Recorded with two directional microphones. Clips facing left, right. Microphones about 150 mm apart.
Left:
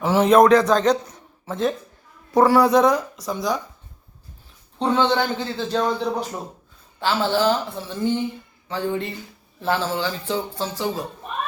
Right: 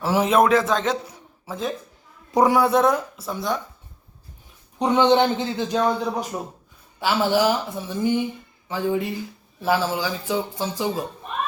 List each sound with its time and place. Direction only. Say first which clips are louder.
0.0 s a man's voice: left 4 dB; 5° right (ahead or behind)
2.3 s a man's voice: left 2 dB; 15° right (ahead or behind)
2.6 s speech: left 2 dB; centre (ahead or behind)
4.8 s a man's voice: right 3 dB; 15° right (ahead or behind)